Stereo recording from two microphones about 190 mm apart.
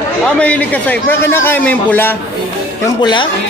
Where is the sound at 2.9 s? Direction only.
25° left (ahead or behind).